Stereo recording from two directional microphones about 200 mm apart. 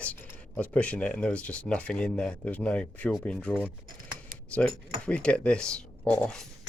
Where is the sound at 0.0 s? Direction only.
5° left (ahead or behind).